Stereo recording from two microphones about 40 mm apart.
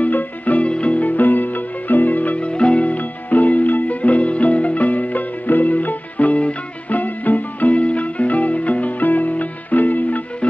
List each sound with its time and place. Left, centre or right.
0.0 s music: left
0.7 s music: left
1.0 s music: left
2.3 s music: left